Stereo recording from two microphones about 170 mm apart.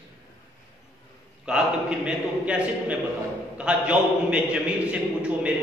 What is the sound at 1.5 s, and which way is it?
A man's voice, 5° right (ahead or behind).